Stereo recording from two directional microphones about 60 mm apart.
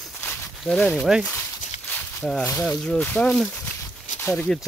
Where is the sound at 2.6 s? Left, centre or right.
Centre.